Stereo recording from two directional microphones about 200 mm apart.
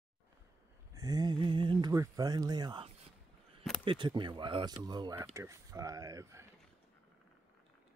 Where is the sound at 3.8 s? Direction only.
25° right (ahead or behind).